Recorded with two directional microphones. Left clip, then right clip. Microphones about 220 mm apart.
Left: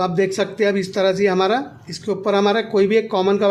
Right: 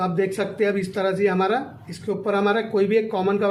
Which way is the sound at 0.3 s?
40° left (ahead or behind).